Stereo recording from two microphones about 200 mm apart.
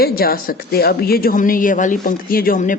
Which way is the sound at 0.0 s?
50° left (ahead or behind).